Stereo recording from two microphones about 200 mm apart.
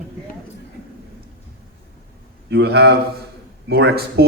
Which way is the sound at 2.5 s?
55° right (ahead or behind).